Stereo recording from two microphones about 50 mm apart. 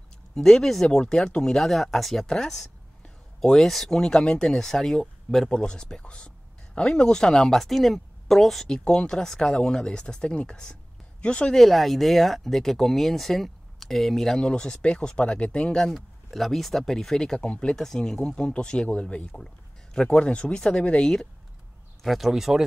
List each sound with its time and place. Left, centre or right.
0.3 s speech: centre
2.2 s speech: centre
8.7 s speech: centre
11.5 s speech: centre
16.3 s speech: centre; by 21.1 s left
22.0 s speech: centre